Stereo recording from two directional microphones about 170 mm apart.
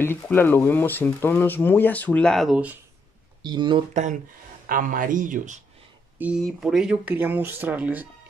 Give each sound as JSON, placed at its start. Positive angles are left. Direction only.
{"t": 0.0, "sound": "speech", "side_deg": 10}
{"t": 3.4, "sound": "speech", "side_deg": -25}
{"t": 3.9, "sound": "speech", "side_deg": -45}
{"t": 6.1, "sound": "speech", "side_deg": -10}